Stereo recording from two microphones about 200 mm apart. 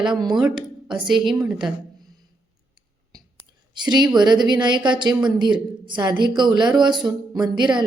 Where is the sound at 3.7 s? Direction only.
20° right (ahead or behind).